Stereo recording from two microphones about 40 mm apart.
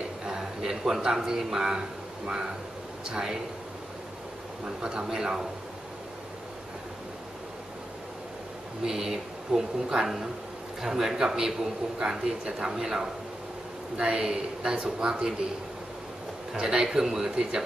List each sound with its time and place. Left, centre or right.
0.2 s a man's voice: centre
4.6 s speech: centre
8.8 s speech: centre
13.9 s speech: right
14.2 s speech: centre
14.8 s speech: right
16.6 s speech: centre